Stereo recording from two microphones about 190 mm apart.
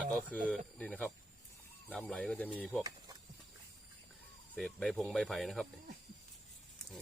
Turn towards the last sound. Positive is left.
turn(degrees=0)  # may be behind; listen again after turning